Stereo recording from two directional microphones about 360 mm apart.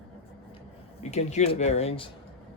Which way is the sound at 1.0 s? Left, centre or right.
Centre.